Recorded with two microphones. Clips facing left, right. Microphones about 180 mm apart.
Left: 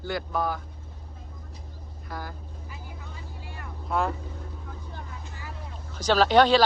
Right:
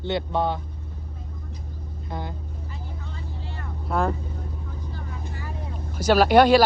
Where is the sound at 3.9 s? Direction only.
Centre (ahead or behind).